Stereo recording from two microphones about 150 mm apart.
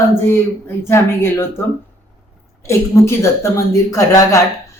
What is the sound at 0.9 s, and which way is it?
Speech, 15° left (ahead or behind).